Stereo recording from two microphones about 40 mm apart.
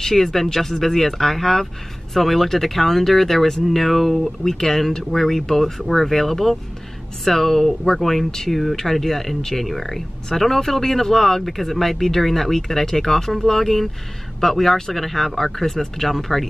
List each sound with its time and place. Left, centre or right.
0.0 s speech: centre